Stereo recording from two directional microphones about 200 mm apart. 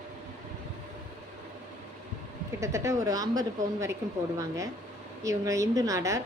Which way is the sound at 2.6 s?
15° right (ahead or behind).